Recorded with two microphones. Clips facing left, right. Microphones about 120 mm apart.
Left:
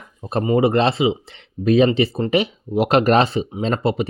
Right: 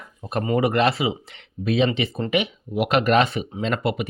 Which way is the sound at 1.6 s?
40° left (ahead or behind).